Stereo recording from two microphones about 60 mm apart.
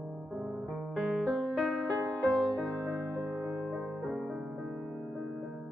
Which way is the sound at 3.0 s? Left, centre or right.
Right.